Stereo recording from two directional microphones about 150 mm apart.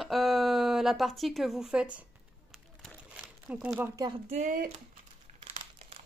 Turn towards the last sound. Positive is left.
turn(degrees=-60)  # may be behind; listen again after turning